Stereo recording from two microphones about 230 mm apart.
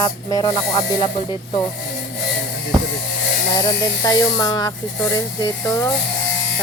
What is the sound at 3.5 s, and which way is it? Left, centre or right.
Speech, centre.